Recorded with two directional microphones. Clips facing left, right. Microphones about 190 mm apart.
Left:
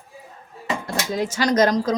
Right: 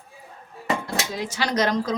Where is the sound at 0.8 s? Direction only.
45° left (ahead or behind).